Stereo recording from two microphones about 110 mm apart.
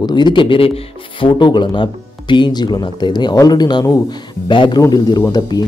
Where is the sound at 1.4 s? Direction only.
45° left (ahead or behind).